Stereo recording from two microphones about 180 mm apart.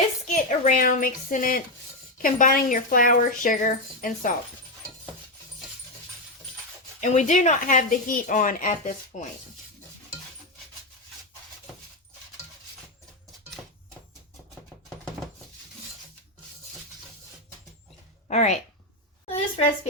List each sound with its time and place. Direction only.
0.3 s a woman's voice: 45° left (ahead or behind)
7.0 s speech: 40° left (ahead or behind)
18.3 s a woman's voice: 40° left (ahead or behind)